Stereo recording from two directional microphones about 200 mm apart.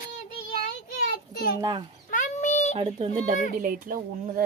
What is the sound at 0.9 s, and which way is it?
Child singing, 45° left (ahead or behind).